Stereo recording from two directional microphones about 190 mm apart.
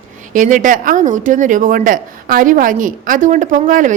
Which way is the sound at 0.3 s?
40° right (ahead or behind).